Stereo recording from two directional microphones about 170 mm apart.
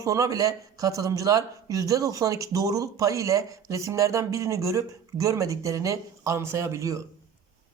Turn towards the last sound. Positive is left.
turn(degrees=-20)  # may be behind; listen again after turning